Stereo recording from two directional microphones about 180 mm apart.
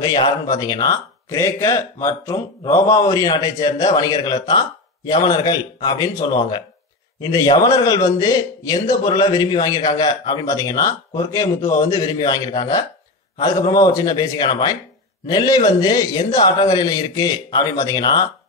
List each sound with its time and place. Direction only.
0.0 s a man's voice: 25° left (ahead or behind)